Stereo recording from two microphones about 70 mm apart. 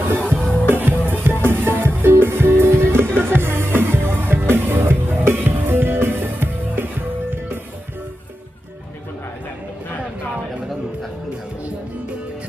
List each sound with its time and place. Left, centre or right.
0.1 s music: right
0.3 s music: centre
0.7 s music: right